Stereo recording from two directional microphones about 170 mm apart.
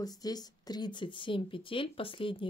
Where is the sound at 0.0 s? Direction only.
20° left (ahead or behind).